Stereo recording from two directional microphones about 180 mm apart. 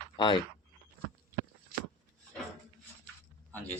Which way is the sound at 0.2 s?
30° left (ahead or behind).